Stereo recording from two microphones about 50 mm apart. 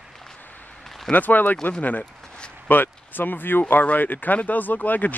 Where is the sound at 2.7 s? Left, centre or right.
Left.